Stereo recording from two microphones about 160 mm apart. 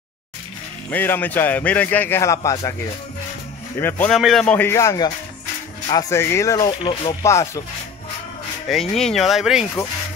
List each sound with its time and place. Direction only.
0.8 s a man's voice: 10° left (ahead or behind)
3.8 s a man's voice: 15° left (ahead or behind)
4.1 s speech: centre (ahead or behind)
4.6 s speech: 15° left (ahead or behind)
7.2 s a man's voice: 20° left (ahead or behind)
8.9 s speech: centre (ahead or behind)